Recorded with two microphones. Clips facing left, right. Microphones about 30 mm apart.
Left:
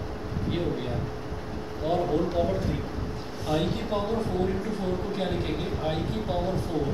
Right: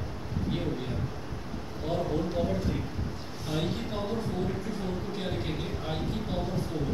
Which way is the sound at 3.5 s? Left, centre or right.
Centre.